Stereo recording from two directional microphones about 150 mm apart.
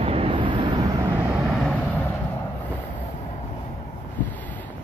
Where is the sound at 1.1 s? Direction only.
15° right (ahead or behind).